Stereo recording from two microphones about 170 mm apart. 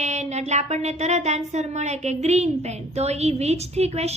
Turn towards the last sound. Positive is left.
turn(degrees=-40)  # may be behind; listen again after turning